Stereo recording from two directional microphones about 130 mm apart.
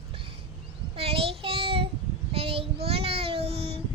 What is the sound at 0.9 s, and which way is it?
Child singing, 45° right (ahead or behind).